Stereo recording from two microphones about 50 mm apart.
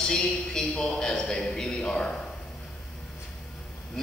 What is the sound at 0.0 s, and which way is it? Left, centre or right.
A man's voice, centre.